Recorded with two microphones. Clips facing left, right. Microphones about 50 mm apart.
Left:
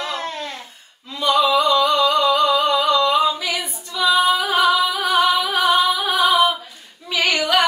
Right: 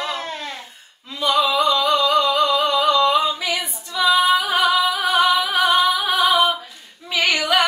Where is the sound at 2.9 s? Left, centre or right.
Right.